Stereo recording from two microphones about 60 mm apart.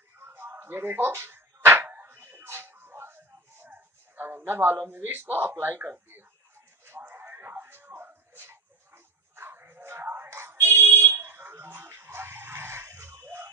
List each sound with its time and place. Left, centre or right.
0.2 s a sound: right
10.0 s fire alarm: right
13.2 s music: right